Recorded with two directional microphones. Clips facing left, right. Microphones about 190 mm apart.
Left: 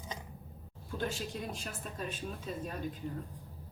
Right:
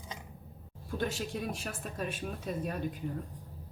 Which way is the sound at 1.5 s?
65° right (ahead or behind).